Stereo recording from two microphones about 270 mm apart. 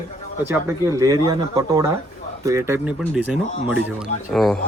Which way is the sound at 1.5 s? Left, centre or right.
Centre.